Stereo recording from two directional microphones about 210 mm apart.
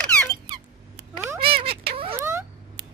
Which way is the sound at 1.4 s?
25° right (ahead or behind).